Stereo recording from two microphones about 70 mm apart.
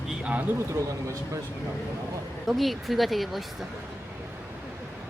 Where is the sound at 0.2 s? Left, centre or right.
Centre.